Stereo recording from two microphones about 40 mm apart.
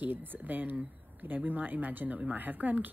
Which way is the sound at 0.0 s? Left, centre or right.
Right.